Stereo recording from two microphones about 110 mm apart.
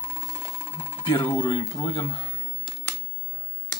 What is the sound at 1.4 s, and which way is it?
Speech, 40° left (ahead or behind).